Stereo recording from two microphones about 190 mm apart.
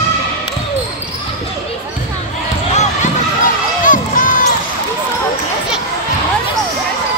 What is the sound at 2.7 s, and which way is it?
Basketball bounce, 35° left (ahead or behind).